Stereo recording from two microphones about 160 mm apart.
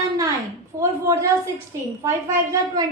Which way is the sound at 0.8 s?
20° right (ahead or behind).